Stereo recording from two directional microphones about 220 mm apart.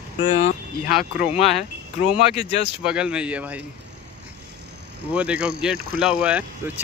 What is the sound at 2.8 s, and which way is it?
Speech, 5° right (ahead or behind).